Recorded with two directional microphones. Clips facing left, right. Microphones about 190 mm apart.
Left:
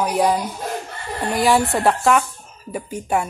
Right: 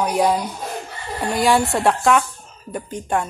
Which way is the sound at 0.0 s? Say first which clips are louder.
Even; centre (ahead or behind).